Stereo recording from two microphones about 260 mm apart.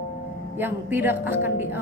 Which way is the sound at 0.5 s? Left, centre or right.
Centre.